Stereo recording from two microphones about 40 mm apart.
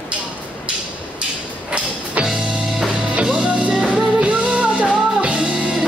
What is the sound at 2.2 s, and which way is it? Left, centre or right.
Music, right.